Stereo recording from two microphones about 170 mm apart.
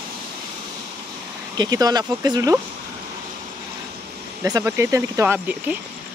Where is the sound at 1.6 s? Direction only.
20° right (ahead or behind).